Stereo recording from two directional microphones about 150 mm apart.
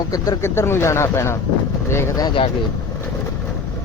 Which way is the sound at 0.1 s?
20° left (ahead or behind).